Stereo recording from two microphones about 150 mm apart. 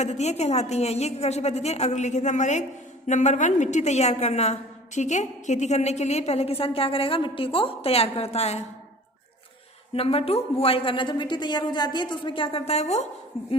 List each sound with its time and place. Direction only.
0.0 s a woman's voice: 50° left (ahead or behind)
9.9 s a woman's voice: 40° left (ahead or behind)